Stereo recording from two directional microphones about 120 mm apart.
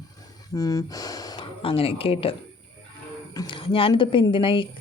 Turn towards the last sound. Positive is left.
turn(degrees=45)  # may be behind; listen again after turning